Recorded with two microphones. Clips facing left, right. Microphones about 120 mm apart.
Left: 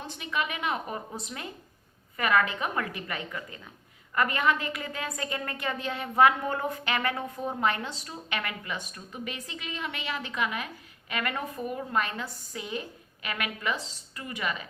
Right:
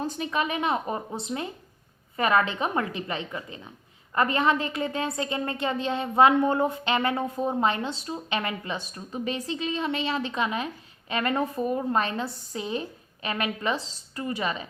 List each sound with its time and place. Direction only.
0.0 s a woman's voice: 35° right (ahead or behind)